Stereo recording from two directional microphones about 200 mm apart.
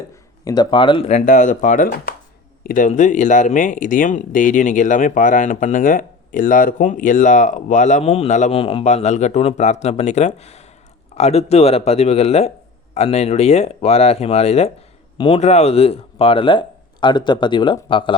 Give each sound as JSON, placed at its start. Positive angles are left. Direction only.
{"t": 0.4, "sound": "speech", "side_deg": 20}